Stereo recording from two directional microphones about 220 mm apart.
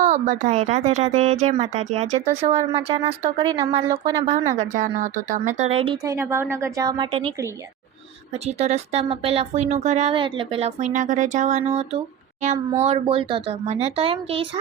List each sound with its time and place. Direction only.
0.0 s speech: 35° right (ahead or behind); by 4.2 s 20° right (ahead or behind)
4.5 s speech: 35° right (ahead or behind)
6.1 s a woman's voice: 10° right (ahead or behind)
8.4 s speech: 30° right (ahead or behind)